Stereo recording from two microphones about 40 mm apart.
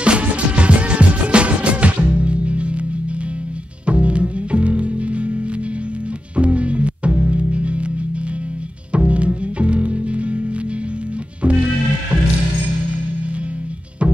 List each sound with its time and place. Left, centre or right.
0.0 s music: right
3.8 s music: right
8.9 s music: right
11.4 s music: right